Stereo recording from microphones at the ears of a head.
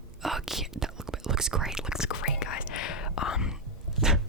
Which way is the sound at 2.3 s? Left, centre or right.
Left.